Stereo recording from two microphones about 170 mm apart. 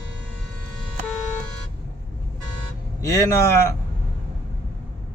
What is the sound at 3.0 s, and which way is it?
Speech, 20° left (ahead or behind).